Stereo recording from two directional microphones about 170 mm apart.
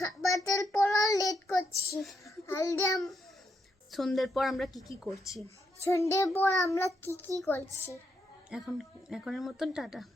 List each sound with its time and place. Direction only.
0.0 s child singing: 20° left (ahead or behind)
2.2 s a sound: 20° left (ahead or behind)
3.9 s a woman's voice: centre (ahead or behind)
5.8 s child singing: 15° left (ahead or behind)
8.4 s a woman's voice: centre (ahead or behind)